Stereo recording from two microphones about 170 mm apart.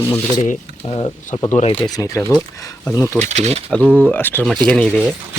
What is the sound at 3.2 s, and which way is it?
Speech, 40° right (ahead or behind).